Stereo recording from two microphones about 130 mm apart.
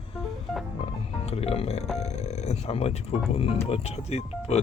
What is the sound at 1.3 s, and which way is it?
Speech, 50° left (ahead or behind).